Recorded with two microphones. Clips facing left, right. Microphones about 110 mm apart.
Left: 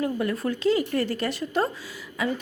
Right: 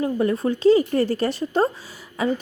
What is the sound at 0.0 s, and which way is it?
A woman's voice, 25° right (ahead or behind).